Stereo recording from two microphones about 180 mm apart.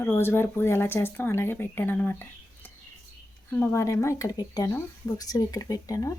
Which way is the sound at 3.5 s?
15° left (ahead or behind).